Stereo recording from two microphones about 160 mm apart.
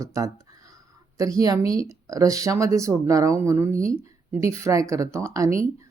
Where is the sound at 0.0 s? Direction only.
20° right (ahead or behind).